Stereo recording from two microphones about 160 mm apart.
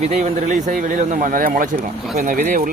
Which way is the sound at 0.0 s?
45° right (ahead or behind).